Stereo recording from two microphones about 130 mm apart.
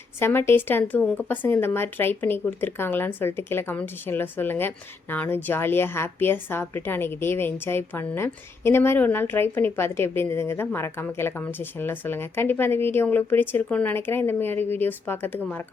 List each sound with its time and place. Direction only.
0.2 s speech: 20° left (ahead or behind)